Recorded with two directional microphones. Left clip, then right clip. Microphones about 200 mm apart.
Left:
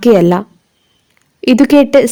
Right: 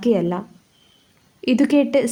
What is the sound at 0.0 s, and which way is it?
A woman's voice, 45° left (ahead or behind).